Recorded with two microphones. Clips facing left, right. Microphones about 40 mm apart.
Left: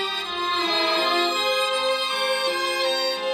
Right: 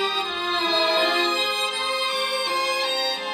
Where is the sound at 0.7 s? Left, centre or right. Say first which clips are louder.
Right 3 dB; centre.